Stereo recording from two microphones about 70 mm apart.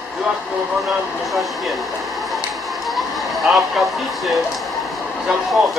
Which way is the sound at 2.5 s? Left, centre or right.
Centre.